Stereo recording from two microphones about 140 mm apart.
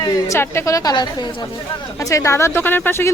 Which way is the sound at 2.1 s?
20° left (ahead or behind).